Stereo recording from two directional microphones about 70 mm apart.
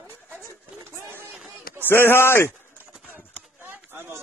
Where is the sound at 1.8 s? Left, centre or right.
Left.